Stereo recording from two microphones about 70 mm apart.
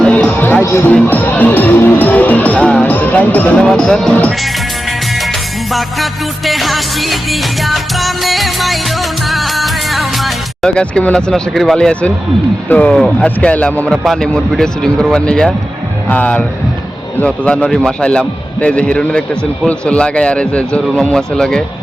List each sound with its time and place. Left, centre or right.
0.0 s music: centre
0.6 s music: left
1.0 s speech: left
2.8 s music: left
3.6 s speech: centre
4.1 s speech: centre
5.7 s music: centre
10.7 s speech: centre
12.6 s speech: left
12.9 s music: centre
13.1 s speech: centre
13.9 s music: centre
15.1 s speech: centre